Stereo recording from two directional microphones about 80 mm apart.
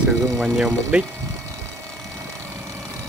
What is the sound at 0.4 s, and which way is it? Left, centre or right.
Speech, centre.